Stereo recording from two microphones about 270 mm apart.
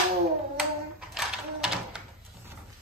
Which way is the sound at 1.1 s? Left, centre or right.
Centre.